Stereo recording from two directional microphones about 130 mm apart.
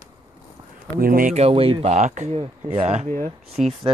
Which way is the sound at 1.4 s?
45° right (ahead or behind).